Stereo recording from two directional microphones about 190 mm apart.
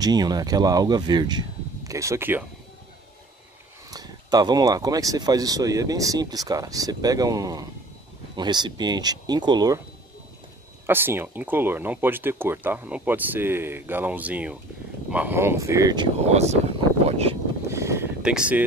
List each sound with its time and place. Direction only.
0.0 s speech: 20° right (ahead or behind)
3.9 s speech: 20° right (ahead or behind)
10.9 s speech: 10° right (ahead or behind)
16.3 s speech: 35° right (ahead or behind)
17.0 s a sound: 30° right (ahead or behind)
17.6 s boat: 15° right (ahead or behind)